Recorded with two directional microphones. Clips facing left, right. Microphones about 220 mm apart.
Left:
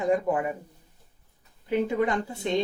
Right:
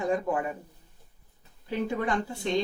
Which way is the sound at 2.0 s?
20° left (ahead or behind).